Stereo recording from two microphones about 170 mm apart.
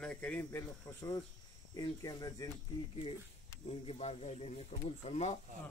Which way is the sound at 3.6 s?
35° left (ahead or behind).